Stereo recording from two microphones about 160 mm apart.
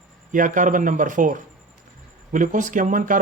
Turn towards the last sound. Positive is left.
turn(degrees=-55)  # may be behind; listen again after turning